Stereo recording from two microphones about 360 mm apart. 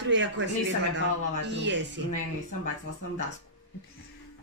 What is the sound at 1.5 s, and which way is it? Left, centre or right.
Speech, right.